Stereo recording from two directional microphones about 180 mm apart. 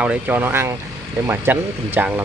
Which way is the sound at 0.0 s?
10° right (ahead or behind).